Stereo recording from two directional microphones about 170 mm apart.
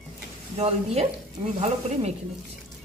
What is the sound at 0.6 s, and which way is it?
Speech, 40° right (ahead or behind).